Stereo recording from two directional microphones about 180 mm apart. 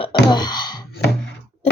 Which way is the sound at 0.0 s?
25° left (ahead or behind).